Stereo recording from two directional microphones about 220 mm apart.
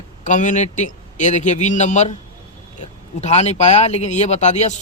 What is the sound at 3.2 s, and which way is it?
A man's voice, 30° left (ahead or behind).